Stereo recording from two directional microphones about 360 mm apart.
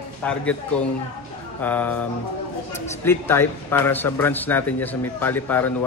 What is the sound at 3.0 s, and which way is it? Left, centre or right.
Speech, centre.